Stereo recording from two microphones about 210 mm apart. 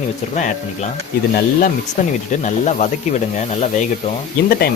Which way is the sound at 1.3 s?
40° left (ahead or behind).